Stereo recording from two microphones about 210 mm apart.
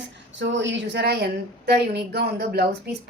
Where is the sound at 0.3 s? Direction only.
60° right (ahead or behind).